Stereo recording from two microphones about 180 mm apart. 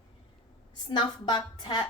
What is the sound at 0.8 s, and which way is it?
Speech, 25° left (ahead or behind).